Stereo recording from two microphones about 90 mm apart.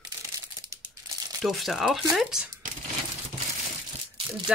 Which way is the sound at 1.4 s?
Centre (ahead or behind).